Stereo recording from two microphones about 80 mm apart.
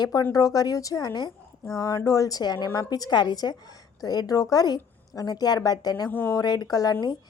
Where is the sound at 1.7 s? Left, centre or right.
Left.